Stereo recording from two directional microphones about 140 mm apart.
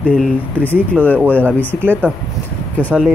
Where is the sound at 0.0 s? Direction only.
10° left (ahead or behind).